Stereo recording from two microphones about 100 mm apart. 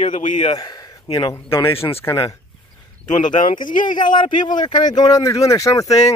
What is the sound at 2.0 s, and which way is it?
Speech, 30° left (ahead or behind).